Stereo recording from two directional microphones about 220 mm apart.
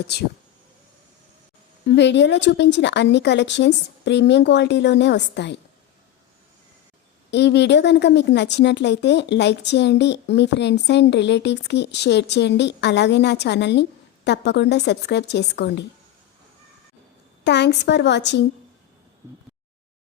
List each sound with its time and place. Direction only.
1.9 s a woman's voice: 50° left (ahead or behind)
7.3 s a woman's voice: 50° left (ahead or behind)
17.4 s a woman's voice: 50° left (ahead or behind)